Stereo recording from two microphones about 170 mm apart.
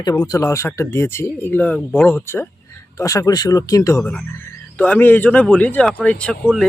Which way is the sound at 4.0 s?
10° left (ahead or behind).